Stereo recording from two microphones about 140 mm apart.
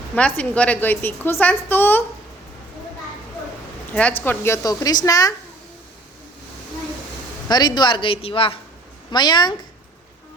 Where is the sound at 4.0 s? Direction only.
10° left (ahead or behind).